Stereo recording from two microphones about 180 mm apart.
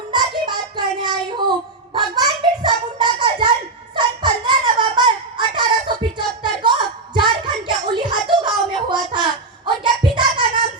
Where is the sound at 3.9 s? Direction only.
25° right (ahead or behind).